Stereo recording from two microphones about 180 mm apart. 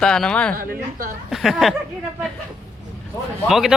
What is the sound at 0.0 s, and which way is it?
Speech, 5° left (ahead or behind).